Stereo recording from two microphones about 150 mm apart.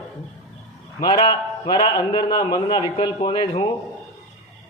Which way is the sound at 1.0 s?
30° left (ahead or behind).